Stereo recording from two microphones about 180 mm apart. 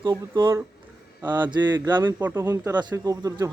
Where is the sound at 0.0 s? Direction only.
20° right (ahead or behind).